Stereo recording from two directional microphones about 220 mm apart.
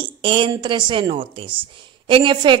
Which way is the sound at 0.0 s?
20° right (ahead or behind).